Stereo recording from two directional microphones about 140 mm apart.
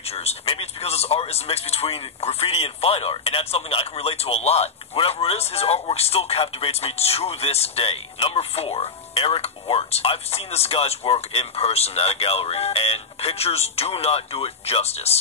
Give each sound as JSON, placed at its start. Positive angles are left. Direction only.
{"t": 0.0, "sound": "speech", "side_deg": 45}